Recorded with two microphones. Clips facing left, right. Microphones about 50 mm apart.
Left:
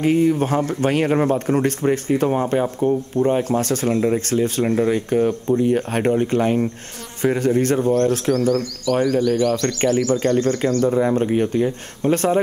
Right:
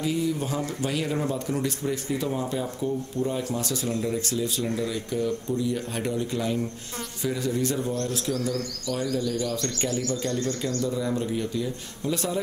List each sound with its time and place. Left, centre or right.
0.0 s speech: left